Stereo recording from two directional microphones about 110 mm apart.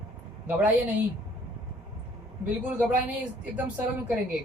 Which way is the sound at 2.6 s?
15° right (ahead or behind).